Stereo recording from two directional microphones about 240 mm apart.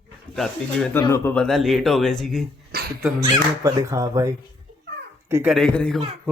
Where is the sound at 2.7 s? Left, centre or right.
Right.